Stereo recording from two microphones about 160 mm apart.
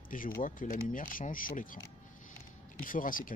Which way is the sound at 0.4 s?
55° left (ahead or behind).